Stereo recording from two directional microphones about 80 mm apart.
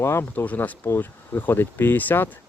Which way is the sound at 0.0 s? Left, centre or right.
Left.